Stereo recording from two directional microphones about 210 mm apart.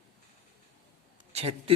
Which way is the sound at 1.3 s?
25° right (ahead or behind).